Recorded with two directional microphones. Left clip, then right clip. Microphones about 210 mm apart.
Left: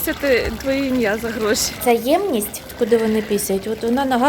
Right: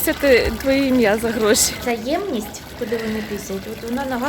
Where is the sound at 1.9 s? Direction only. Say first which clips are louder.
Left 5 dB; 30° left (ahead or behind).